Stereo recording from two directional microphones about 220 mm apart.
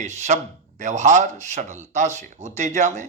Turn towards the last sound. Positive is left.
turn(degrees=-35)  # may be behind; listen again after turning